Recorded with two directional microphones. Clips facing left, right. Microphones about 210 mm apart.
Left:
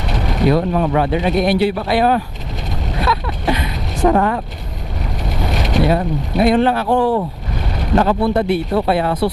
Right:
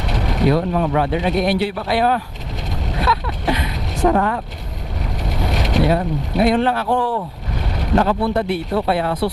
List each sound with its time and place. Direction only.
0.3 s speech: 20° left (ahead or behind)
3.0 s vehicle: 15° left (ahead or behind)
5.5 s speech: 15° left (ahead or behind)
7.9 s speech: 15° left (ahead or behind)